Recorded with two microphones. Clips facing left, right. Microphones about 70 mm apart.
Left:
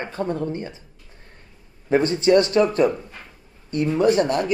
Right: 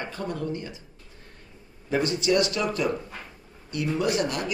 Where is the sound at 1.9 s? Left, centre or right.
Left.